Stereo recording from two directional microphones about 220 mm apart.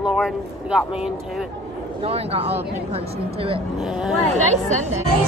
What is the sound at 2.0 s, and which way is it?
Speech, 25° right (ahead or behind).